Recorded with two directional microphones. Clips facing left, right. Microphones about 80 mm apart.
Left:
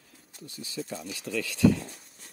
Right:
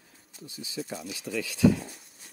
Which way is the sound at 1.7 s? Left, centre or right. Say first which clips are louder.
Even; centre.